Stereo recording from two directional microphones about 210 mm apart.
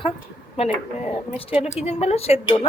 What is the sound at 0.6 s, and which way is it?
A woman's voice, 30° left (ahead or behind).